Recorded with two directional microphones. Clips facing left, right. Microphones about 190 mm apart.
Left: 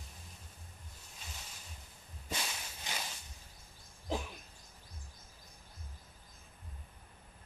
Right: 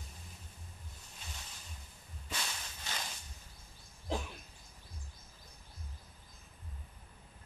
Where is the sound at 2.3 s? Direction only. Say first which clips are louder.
Left 2 dB; 15° left (ahead or behind).